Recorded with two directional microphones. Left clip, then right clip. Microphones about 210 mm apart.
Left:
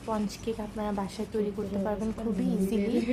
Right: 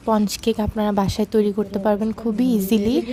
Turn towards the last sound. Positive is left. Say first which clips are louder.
# right 8 dB
turn(degrees=-45)  # may be behind; listen again after turning